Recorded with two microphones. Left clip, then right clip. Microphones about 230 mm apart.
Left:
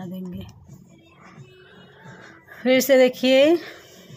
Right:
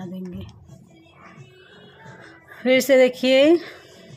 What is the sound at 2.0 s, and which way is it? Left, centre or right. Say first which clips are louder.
Speech: even; centre.